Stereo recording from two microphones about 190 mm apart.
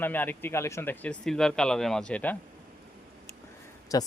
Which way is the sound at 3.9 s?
20° left (ahead or behind).